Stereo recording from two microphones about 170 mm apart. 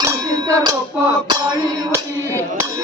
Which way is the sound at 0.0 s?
20° right (ahead or behind).